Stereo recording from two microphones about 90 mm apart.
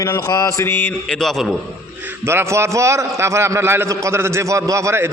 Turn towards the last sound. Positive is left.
turn(degrees=-30)  # may be behind; listen again after turning